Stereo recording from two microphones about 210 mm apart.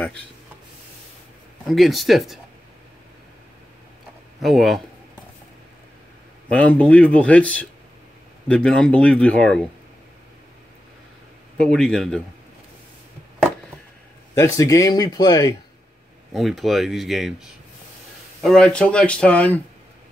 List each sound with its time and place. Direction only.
1.7 s speech: centre (ahead or behind)
4.4 s speech: centre (ahead or behind)
6.5 s a man's voice: 5° left (ahead or behind)
11.5 s speech: 5° left (ahead or behind)
14.3 s a man's voice: 15° left (ahead or behind)
16.3 s speech: centre (ahead or behind)